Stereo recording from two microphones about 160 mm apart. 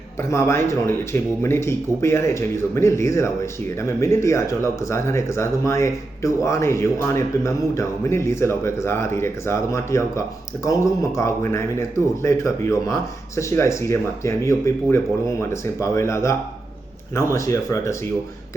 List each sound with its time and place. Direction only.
0.2 s speech: 15° left (ahead or behind)
17.3 s speech: 20° left (ahead or behind)